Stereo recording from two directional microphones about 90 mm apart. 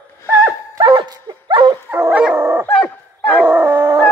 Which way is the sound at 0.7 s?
60° right (ahead or behind).